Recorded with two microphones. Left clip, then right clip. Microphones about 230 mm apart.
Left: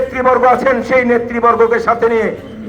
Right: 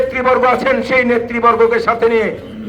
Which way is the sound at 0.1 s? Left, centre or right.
Right.